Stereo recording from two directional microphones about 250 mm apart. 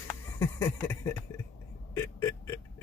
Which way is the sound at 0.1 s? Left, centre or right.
Centre.